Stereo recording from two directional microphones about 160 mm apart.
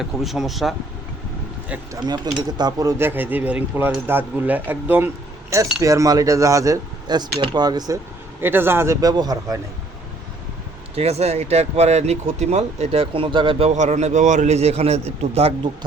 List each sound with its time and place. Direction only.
0.0 s speech: centre (ahead or behind)
1.9 s speech: 25° right (ahead or behind)
8.4 s speech: 15° right (ahead or behind)
10.9 s speech: 40° right (ahead or behind)